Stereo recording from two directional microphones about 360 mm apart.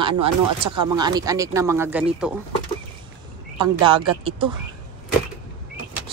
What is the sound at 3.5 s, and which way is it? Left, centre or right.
Speech, centre.